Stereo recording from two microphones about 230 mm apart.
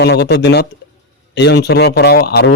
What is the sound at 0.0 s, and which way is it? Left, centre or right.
Speech, left.